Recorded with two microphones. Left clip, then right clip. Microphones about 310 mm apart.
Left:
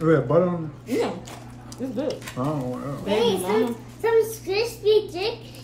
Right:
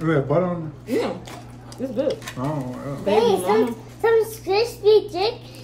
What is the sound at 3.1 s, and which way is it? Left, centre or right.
A child's voice, centre.